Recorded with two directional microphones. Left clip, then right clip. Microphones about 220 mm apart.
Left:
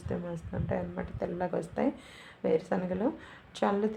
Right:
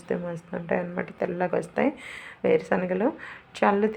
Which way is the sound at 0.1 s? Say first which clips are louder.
Right 7 dB; 15° right (ahead or behind).